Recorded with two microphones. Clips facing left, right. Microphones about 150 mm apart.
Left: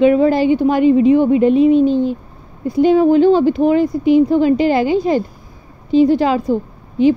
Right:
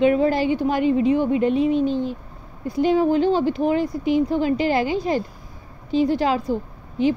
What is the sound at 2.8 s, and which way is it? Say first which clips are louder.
A woman's voice: left 7 dB; 70° left (ahead or behind).